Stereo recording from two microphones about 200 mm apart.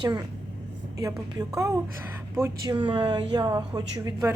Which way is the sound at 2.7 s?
25° right (ahead or behind).